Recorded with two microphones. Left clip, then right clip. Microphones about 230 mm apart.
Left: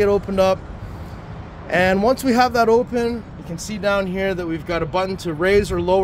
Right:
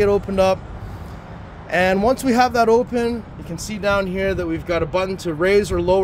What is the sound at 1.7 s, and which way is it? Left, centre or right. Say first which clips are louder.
Speech: even; centre.